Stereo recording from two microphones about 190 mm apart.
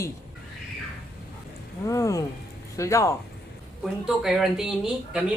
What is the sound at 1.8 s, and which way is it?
Speech, 15° left (ahead or behind).